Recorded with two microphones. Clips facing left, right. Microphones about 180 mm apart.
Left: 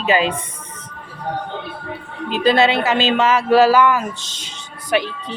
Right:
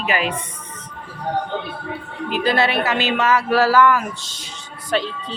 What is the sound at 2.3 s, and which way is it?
Speech, 20° left (ahead or behind).